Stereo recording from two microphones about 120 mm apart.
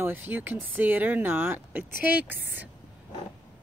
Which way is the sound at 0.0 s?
15° right (ahead or behind).